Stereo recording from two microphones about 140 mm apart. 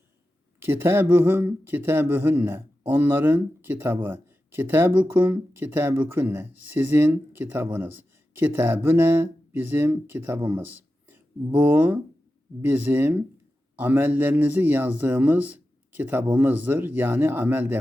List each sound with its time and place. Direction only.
0.6 s speech: 15° right (ahead or behind)